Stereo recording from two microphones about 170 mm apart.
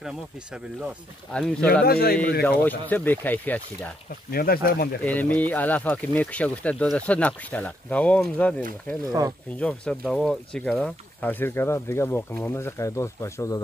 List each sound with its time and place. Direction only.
0.0 s speech: 5° right (ahead or behind)
1.7 s speech: 65° left (ahead or behind)
2.6 s speech: 10° left (ahead or behind)
4.3 s speech: 65° left (ahead or behind)
5.0 s speech: 10° left (ahead or behind)